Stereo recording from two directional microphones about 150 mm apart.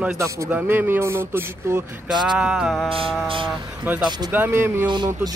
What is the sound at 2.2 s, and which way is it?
Speech, 5° right (ahead or behind).